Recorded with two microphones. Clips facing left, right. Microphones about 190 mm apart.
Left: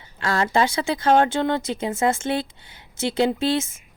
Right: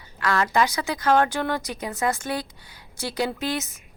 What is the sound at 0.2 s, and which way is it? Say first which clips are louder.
Speech: left 1 dB; 25° left (ahead or behind).